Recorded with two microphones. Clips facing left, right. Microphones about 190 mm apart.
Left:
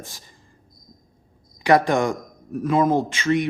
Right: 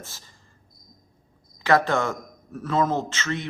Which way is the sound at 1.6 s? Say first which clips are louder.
Left 3 dB; 15° left (ahead or behind).